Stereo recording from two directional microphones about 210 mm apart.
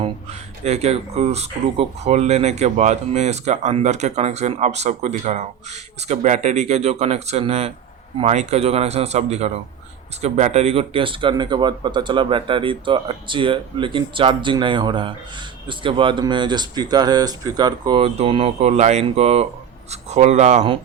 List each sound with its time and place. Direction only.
0.0 s speech: 30° right (ahead or behind)